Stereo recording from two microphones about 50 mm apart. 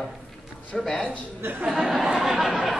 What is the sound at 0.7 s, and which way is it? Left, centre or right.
Speech, centre.